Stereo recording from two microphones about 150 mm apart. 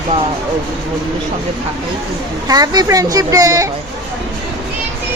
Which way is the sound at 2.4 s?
25° right (ahead or behind).